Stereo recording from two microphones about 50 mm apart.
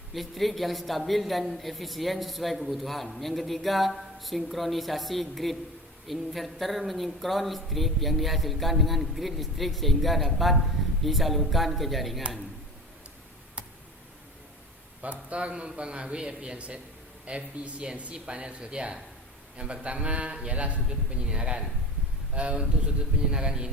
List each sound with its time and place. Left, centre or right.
0.1 s a man's voice: centre
15.0 s a man's voice: right